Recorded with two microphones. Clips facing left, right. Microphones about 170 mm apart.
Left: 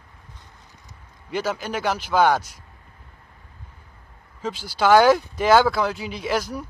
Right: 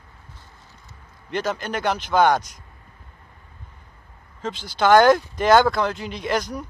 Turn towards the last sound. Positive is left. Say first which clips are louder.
# even
turn(degrees=5)  # may be behind; listen again after turning